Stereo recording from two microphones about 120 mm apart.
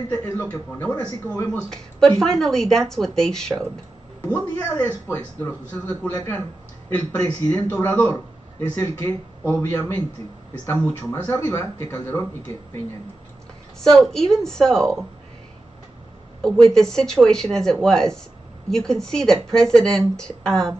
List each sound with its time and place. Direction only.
0.2 s speech: 20° left (ahead or behind)
1.5 s a man's voice: 5° left (ahead or behind)
11.2 s a man's voice: 15° left (ahead or behind)
13.7 s speech: 5° left (ahead or behind)
16.3 s speech: 5° left (ahead or behind)